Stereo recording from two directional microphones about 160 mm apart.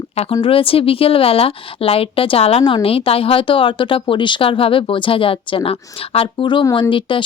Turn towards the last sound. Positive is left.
turn(degrees=30)  # may be behind; listen again after turning